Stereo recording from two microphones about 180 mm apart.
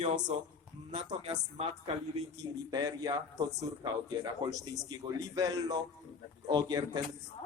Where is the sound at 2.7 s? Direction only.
20° right (ahead or behind).